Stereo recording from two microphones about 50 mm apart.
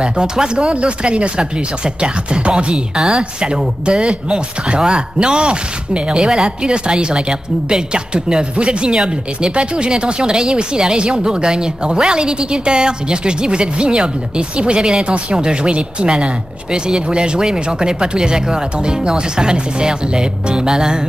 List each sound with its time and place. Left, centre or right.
0.0 s speech: centre